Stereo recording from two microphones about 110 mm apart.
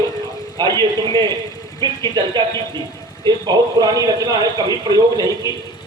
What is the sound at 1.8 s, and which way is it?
Speech, 40° right (ahead or behind).